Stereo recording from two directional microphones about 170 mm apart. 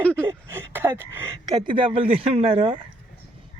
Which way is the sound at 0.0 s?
10° left (ahead or behind).